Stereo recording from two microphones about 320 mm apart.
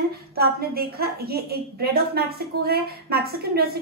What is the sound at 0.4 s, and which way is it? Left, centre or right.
A woman's voice, right.